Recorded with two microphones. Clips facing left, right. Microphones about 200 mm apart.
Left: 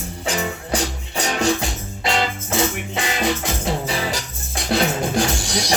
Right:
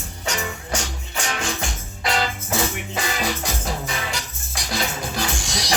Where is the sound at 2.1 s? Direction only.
25° left (ahead or behind).